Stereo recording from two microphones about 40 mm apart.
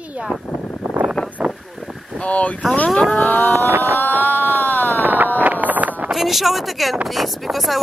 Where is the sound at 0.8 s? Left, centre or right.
Right.